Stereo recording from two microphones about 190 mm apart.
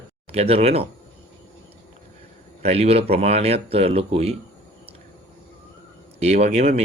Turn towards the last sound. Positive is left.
turn(degrees=-35)  # may be behind; listen again after turning